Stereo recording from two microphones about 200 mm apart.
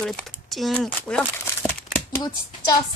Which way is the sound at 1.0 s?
5° left (ahead or behind).